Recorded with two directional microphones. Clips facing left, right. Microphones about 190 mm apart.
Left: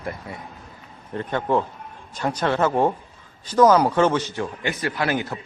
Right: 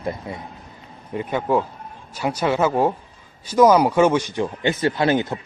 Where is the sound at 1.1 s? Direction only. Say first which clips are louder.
Right 2 dB; 5° right (ahead or behind).